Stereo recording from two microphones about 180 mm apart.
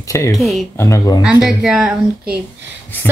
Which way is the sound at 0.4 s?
Centre (ahead or behind).